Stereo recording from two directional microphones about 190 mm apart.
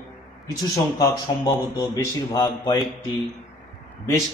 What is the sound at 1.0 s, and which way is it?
Speech, 20° left (ahead or behind).